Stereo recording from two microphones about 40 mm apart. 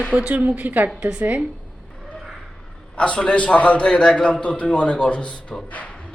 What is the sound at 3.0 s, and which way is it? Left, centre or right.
Speech, left.